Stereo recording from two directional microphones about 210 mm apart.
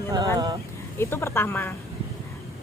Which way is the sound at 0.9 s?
10° left (ahead or behind).